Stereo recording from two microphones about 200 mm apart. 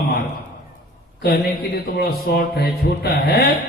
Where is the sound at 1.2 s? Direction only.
55° left (ahead or behind).